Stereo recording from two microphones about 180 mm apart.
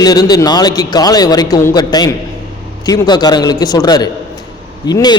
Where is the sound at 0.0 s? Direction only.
20° left (ahead or behind).